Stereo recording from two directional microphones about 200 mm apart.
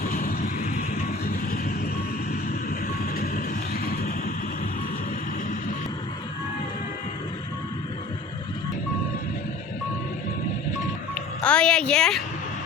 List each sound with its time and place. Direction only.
0.0 s vehicle: 40° left (ahead or behind)
2.3 s vehicle: 45° left (ahead or behind)
11.1 s music: 5° left (ahead or behind)